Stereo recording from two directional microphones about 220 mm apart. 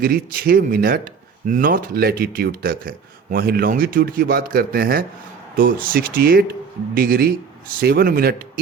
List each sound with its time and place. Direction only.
0.0 s speech: 40° right (ahead or behind)